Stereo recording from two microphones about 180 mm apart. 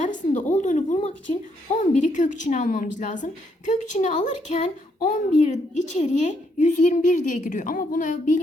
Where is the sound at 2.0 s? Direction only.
45° left (ahead or behind).